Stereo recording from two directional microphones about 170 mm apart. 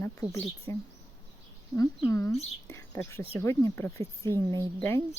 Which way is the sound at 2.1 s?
15° left (ahead or behind).